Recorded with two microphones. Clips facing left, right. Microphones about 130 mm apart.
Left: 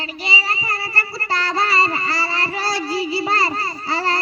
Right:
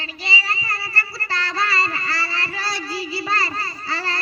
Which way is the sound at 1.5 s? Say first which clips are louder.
Left 4 dB; 25° left (ahead or behind).